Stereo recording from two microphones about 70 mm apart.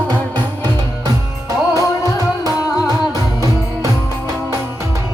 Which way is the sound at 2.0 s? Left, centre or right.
Right.